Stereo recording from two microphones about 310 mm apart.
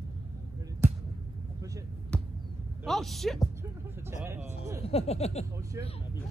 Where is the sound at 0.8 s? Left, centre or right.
Centre.